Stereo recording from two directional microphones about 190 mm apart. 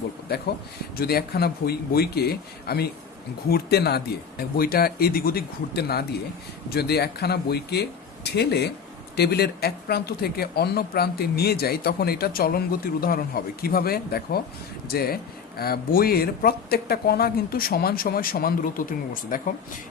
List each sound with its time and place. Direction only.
0.9 s a man's voice: 55° left (ahead or behind)